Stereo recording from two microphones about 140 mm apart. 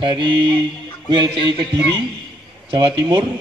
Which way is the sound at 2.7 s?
30° right (ahead or behind).